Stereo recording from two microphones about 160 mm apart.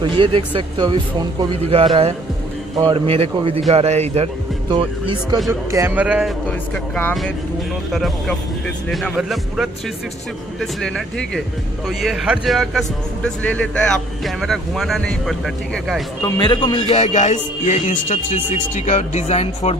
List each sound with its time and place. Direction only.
0.2 s speech: 30° right (ahead or behind)
4.6 s speech: 30° right (ahead or behind)
5.5 s speech: 15° right (ahead or behind)
6.4 s a man's voice: 10° left (ahead or behind)
10.6 s a man's voice: 5° left (ahead or behind)
16.2 s a man's voice: 25° left (ahead or behind)
17.0 s speech: 45° left (ahead or behind)